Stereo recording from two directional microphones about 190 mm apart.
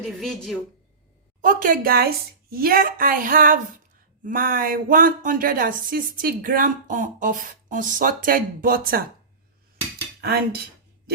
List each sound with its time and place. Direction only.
0.0 s a woman's voice: centre (ahead or behind)
1.4 s speech: 45° right (ahead or behind)
10.2 s speech: 55° right (ahead or behind)